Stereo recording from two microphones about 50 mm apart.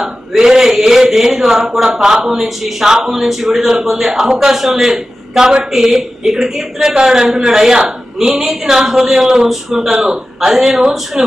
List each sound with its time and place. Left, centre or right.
0.0 s a man's voice: centre